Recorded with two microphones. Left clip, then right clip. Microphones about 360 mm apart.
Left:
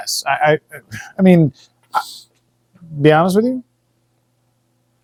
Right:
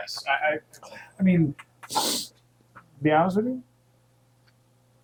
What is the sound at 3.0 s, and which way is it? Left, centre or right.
Speech, left.